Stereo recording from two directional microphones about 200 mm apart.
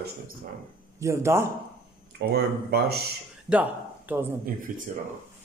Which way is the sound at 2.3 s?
55° right (ahead or behind).